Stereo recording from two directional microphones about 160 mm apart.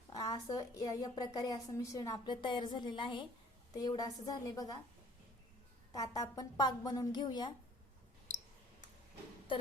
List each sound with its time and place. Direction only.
0.1 s a woman's voice: 25° left (ahead or behind)
5.9 s a woman's voice: 25° left (ahead or behind)